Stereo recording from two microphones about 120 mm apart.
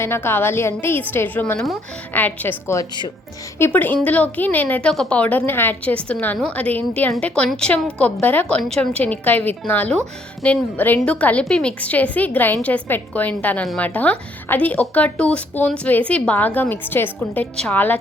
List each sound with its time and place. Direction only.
0.0 s a woman's voice: 20° left (ahead or behind)
1.5 s speech: centre (ahead or behind)
2.1 s a woman's voice: 15° left (ahead or behind)